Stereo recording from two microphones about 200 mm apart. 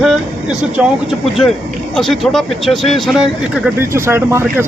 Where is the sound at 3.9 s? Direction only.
15° right (ahead or behind).